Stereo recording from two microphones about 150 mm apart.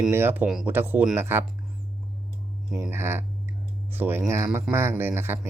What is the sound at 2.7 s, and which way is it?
Speech, 15° right (ahead or behind).